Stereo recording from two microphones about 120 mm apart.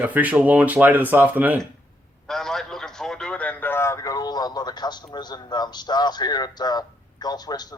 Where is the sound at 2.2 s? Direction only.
5° left (ahead or behind).